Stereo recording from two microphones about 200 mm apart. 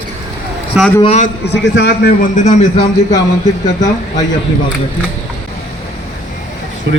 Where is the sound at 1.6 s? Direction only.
65° left (ahead or behind).